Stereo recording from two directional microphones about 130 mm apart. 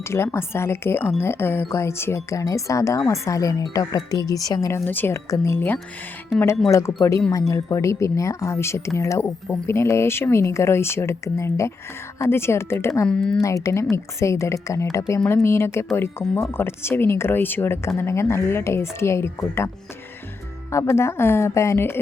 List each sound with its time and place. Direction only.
0.0 s speech: 20° left (ahead or behind)
4.9 s speech: 15° left (ahead or behind)
13.1 s speech: 5° left (ahead or behind)
13.4 s speech: 25° left (ahead or behind)